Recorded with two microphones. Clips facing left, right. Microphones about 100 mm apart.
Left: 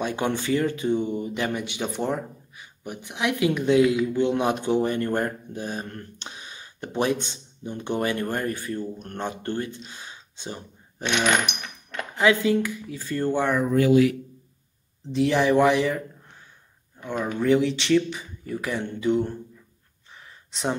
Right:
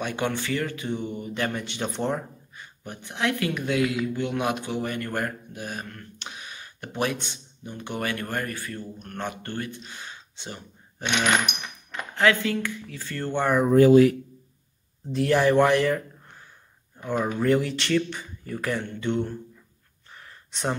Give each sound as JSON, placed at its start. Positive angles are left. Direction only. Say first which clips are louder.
{"t": 0.0, "sound": "speech", "louder": "left 2 dB", "side_deg": 20}
{"t": 12.2, "sound": "speech", "louder": "left 2 dB", "side_deg": 20}
{"t": 13.7, "sound": "speech", "louder": "right 5 dB", "side_deg": -40}
{"t": 15.0, "sound": "a man's voice", "louder": "even", "side_deg": 0}
{"t": 17.0, "sound": "a man's voice", "louder": "right 1 dB", "side_deg": -5}
{"t": 20.2, "sound": "a sound", "louder": "left 1 dB", "side_deg": 0}